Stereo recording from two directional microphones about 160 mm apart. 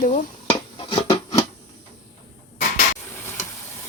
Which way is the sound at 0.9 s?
25° left (ahead or behind).